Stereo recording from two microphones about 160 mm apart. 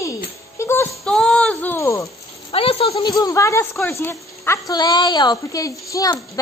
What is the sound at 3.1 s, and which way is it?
A woman's voice, 20° left (ahead or behind).